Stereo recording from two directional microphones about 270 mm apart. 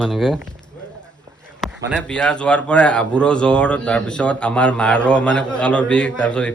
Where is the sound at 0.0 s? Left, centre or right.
Centre.